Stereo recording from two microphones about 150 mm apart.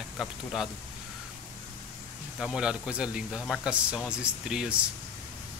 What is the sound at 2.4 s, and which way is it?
Speech, 5° right (ahead or behind).